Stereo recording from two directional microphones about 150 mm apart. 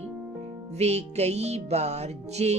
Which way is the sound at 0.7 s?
45° right (ahead or behind).